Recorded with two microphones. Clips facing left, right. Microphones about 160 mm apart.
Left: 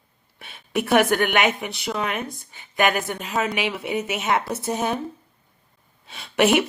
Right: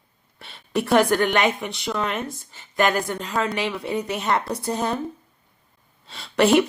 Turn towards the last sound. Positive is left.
turn(degrees=0)  # may be behind; listen again after turning